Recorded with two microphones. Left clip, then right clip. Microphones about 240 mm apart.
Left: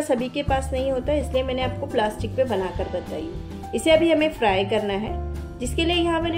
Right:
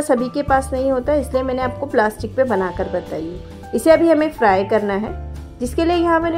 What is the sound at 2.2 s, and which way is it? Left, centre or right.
Speech, right.